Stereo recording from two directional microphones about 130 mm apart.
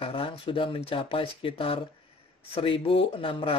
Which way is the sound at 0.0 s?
45° left (ahead or behind).